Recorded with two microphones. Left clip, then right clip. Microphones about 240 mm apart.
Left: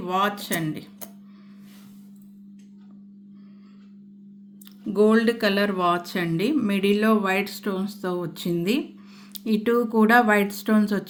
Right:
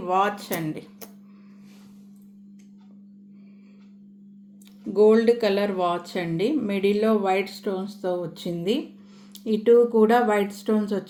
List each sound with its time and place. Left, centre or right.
0.1 s speech: left
4.9 s speech: left